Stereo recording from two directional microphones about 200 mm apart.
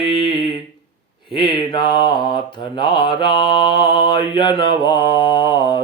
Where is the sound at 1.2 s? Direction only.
25° left (ahead or behind).